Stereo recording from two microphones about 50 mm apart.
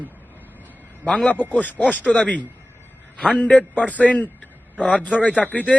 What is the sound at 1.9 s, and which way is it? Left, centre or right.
Speech, left.